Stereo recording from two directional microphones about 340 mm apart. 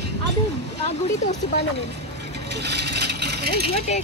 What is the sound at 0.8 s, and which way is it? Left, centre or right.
Speech, centre.